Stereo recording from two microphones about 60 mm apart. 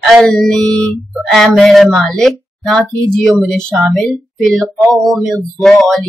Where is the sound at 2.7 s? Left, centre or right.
Left.